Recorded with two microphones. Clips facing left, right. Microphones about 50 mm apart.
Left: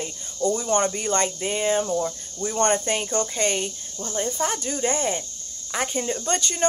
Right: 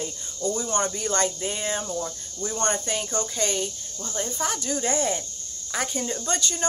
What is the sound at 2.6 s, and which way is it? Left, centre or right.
Speech, left.